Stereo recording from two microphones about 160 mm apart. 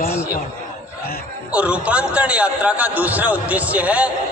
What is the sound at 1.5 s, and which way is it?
A man's voice, 5° right (ahead or behind).